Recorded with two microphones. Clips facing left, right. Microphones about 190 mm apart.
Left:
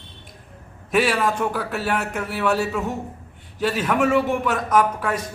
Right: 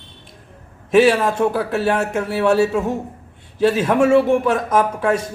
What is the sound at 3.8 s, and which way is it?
A man's voice, 25° right (ahead or behind).